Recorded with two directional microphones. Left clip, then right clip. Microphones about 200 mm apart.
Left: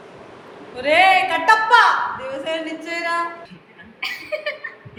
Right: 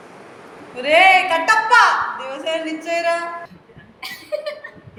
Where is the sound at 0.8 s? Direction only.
20° left (ahead or behind).